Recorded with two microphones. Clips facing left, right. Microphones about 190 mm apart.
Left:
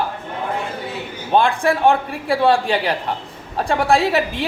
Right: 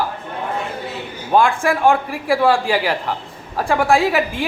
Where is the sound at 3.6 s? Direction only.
30° left (ahead or behind).